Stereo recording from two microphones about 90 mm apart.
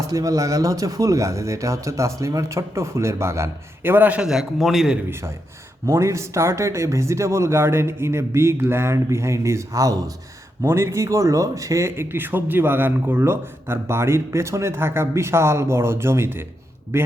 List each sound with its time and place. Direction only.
0.1 s speech: 40° right (ahead or behind); by 4.3 s 15° right (ahead or behind)
4.3 s a man's voice: 5° right (ahead or behind)
5.8 s speech: 35° right (ahead or behind)